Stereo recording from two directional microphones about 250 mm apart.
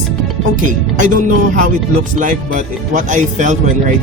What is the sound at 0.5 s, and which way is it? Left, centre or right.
Speech, right.